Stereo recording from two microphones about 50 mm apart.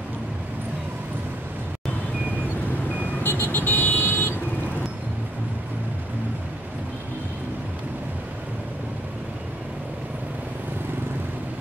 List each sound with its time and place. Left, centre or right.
3.3 s vehicle: left